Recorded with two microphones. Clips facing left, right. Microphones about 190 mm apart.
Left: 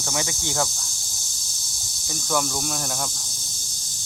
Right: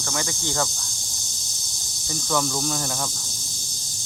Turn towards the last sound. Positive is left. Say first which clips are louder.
# right 1 dB
turn(degrees=0)  # may be behind; listen again after turning